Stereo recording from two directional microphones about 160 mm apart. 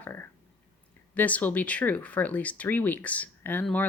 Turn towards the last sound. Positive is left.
turn(degrees=10)  # may be behind; listen again after turning